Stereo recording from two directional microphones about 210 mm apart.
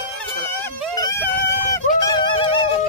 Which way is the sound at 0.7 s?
10° left (ahead or behind).